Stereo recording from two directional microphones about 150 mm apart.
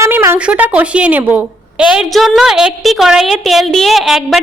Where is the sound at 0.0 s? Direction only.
20° right (ahead or behind).